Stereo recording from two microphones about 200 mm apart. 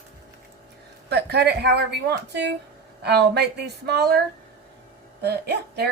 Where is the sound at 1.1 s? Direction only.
55° right (ahead or behind).